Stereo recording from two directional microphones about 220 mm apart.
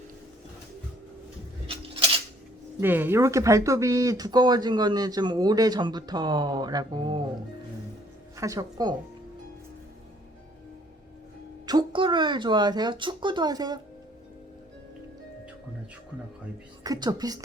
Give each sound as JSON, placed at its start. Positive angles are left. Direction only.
{"t": 1.6, "sound": "a sound", "side_deg": -25}
{"t": 2.8, "sound": "speech", "side_deg": -10}
{"t": 8.4, "sound": "speech", "side_deg": -15}
{"t": 11.6, "sound": "speech", "side_deg": -20}
{"t": 16.8, "sound": "speech", "side_deg": -15}